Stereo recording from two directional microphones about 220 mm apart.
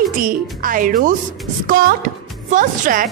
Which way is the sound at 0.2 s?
40° right (ahead or behind).